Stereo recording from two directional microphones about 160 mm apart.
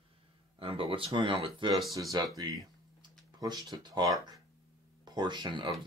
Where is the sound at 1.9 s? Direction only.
20° right (ahead or behind).